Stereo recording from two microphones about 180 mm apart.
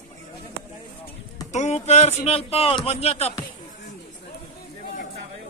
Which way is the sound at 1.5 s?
40° left (ahead or behind).